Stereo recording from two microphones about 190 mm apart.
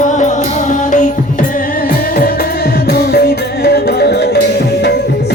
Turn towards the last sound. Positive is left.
turn(degrees=60)  # may be behind; listen again after turning